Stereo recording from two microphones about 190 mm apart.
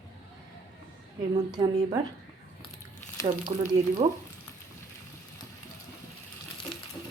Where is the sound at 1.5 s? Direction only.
20° right (ahead or behind).